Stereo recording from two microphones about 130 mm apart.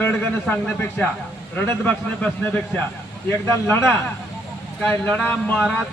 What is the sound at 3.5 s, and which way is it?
Speech, 20° left (ahead or behind).